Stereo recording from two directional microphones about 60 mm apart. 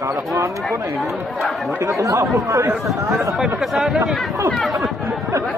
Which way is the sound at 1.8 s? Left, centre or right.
Right.